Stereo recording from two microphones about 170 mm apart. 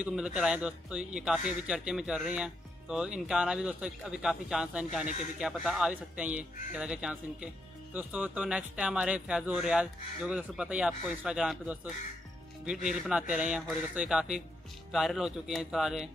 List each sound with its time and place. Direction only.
0.0 s a man's voice: 5° right (ahead or behind)